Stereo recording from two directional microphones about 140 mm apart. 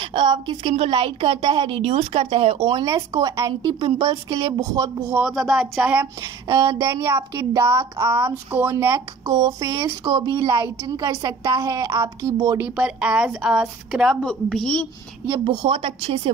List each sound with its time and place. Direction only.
0.0 s a woman's voice: 35° right (ahead or behind)
2.8 s speech: 25° right (ahead or behind)
3.8 s speech: 40° right (ahead or behind)
4.4 s speech: 25° right (ahead or behind)
5.1 s speech: 5° right (ahead or behind)
6.2 s a sound: 20° right (ahead or behind)
6.8 s speech: 20° right (ahead or behind)
10.0 s speech: 30° right (ahead or behind)
12.5 s a woman's voice: 10° right (ahead or behind)
15.4 s speech: 40° right (ahead or behind)